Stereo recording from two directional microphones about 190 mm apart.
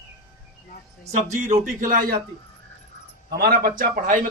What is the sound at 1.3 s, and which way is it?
Speech, 40° right (ahead or behind).